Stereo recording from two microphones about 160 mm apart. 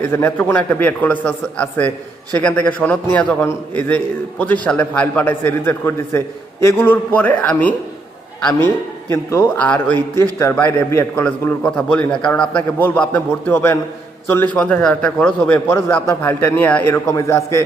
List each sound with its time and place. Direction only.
0.1 s a man's voice: 15° left (ahead or behind)
9.3 s a man's voice: 15° left (ahead or behind)